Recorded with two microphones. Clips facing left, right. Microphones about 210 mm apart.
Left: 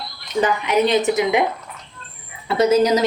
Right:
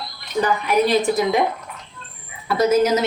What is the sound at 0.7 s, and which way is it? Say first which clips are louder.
Speech: even; 20° left (ahead or behind).